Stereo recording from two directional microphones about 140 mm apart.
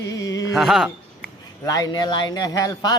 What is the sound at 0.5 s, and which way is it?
Speech, 5° right (ahead or behind).